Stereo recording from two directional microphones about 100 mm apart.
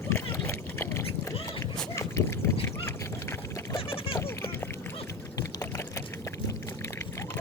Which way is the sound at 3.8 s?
65° left (ahead or behind).